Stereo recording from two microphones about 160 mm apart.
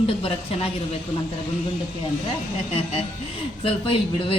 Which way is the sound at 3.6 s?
35° left (ahead or behind).